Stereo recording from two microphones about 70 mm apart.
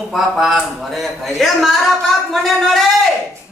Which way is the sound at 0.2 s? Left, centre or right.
Centre.